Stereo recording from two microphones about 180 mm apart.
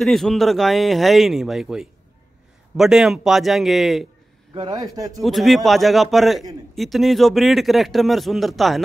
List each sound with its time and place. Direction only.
0.0 s a man's voice: centre (ahead or behind)
4.6 s a man's voice: 25° right (ahead or behind)
5.2 s a man's voice: centre (ahead or behind)